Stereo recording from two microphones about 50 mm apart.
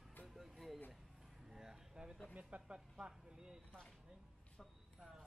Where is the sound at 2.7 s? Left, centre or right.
Centre.